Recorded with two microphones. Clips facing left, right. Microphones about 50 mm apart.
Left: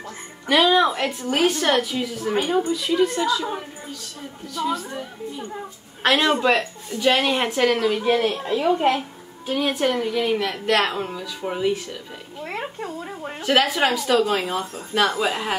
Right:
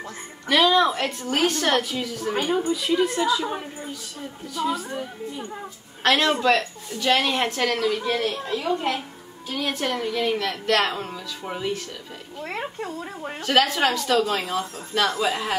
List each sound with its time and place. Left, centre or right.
0.5 s a woman's voice: centre